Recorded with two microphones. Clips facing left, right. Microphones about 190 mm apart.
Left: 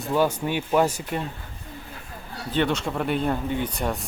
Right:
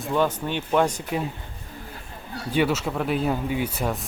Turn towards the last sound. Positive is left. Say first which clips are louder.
# right 1 dB
turn(degrees=0)  # may be behind; listen again after turning